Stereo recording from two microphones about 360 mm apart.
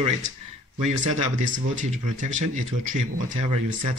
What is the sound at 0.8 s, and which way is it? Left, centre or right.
Speech, centre.